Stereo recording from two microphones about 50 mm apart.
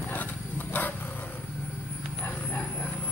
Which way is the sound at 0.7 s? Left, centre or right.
Left.